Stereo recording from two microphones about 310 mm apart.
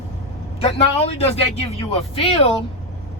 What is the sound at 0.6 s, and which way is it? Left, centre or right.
A man's voice, centre.